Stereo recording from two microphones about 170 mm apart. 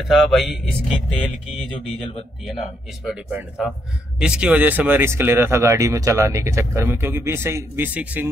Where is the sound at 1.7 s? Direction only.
35° left (ahead or behind).